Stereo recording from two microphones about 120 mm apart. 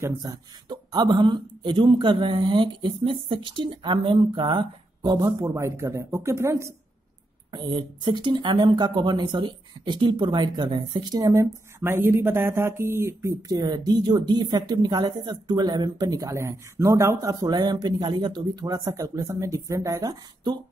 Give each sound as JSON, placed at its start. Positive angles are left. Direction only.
{"t": 0.0, "sound": "a woman's voice", "side_deg": -30}
{"t": 7.5, "sound": "a woman's voice", "side_deg": -40}
{"t": 11.8, "sound": "speech", "side_deg": -20}